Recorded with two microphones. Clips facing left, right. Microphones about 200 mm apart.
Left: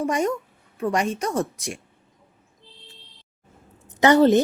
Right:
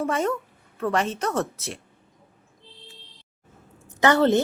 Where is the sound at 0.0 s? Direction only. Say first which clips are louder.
Left 1 dB; 15° left (ahead or behind).